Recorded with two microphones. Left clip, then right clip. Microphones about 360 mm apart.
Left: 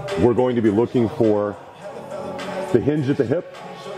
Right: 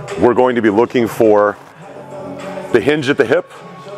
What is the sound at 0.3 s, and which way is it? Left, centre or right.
Speech, centre.